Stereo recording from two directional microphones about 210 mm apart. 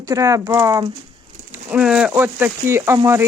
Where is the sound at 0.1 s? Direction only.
15° right (ahead or behind).